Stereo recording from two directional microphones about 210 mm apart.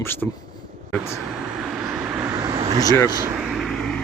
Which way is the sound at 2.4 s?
20° right (ahead or behind).